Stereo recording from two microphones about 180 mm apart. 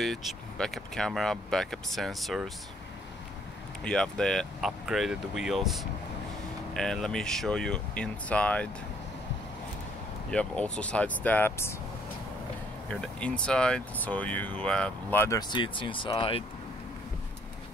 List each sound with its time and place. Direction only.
0.0 s speech: centre (ahead or behind)
3.8 s speech: 5° left (ahead or behind)
10.3 s speech: 5° left (ahead or behind)
13.0 s speech: 5° left (ahead or behind)
15.5 s speech: 30° left (ahead or behind)